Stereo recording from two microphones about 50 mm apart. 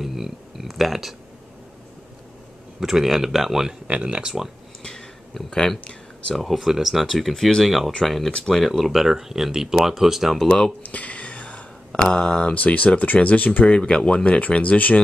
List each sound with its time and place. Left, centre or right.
0.0 s speech: centre
2.8 s speech: centre
3.8 s speech: right
5.3 s speech: centre
6.3 s speech: centre
8.3 s speech: centre
8.5 s speech: centre
10.8 s speech: left